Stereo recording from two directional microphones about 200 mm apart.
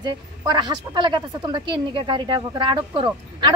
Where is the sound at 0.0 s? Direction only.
20° right (ahead or behind).